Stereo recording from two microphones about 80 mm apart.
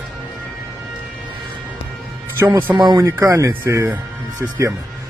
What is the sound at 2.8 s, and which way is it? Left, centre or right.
Speech, right.